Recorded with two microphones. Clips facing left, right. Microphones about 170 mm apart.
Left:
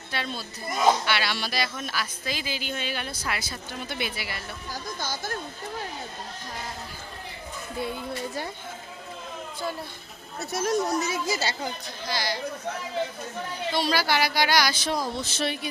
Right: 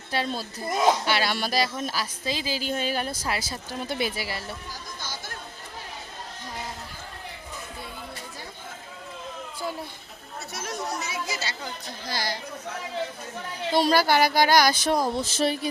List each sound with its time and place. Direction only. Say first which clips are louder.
0.1 s a woman's voice: right 5 dB; 40° right (ahead or behind)
4.7 s speech: left 5 dB; 45° left (ahead or behind)
10.5 s speech: left 8 dB; 40° left (ahead or behind)
12.0 s speech: left 2 dB; 50° right (ahead or behind)
13.7 s speech: right 5 dB; 50° right (ahead or behind)